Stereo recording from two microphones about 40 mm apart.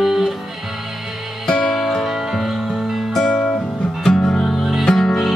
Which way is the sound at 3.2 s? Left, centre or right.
Left.